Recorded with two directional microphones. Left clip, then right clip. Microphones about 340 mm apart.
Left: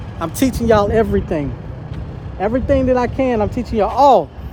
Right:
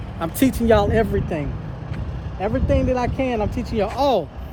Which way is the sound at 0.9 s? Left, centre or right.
Centre.